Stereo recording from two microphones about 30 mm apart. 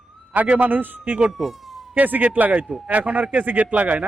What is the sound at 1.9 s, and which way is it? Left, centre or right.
A man's voice, right.